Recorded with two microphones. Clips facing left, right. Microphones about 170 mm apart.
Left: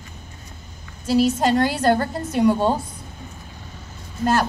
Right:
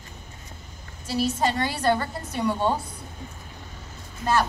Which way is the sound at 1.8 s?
45° left (ahead or behind).